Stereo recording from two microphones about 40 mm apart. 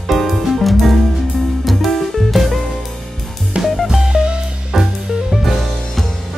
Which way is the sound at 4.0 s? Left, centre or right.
Centre.